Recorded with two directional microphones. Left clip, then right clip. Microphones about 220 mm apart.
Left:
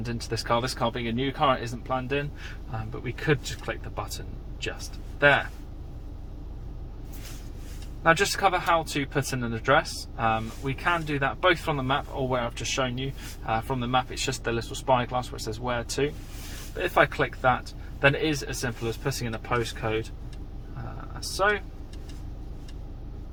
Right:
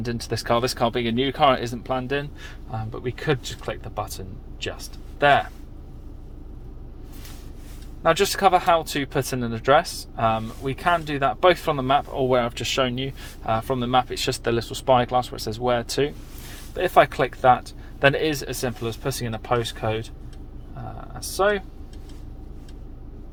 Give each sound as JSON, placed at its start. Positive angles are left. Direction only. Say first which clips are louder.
{"t": 0.0, "sound": "speech", "louder": "right 4 dB", "side_deg": -45}
{"t": 8.0, "sound": "speech", "louder": "right 3 dB", "side_deg": -45}
{"t": 21.2, "sound": "speech", "louder": "right 3 dB", "side_deg": -45}